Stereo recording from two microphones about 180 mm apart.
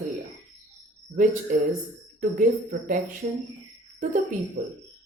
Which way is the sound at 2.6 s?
45° right (ahead or behind).